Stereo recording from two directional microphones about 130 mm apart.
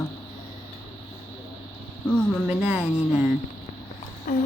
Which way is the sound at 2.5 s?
10° right (ahead or behind).